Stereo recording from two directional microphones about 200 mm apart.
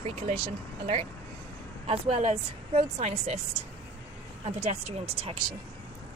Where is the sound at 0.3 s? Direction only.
25° right (ahead or behind).